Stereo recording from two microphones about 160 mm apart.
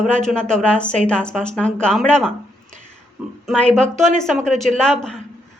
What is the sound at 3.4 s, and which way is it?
A woman's voice, 5° left (ahead or behind).